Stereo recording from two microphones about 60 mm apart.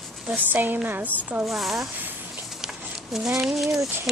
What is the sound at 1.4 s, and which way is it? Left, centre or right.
Speech, centre.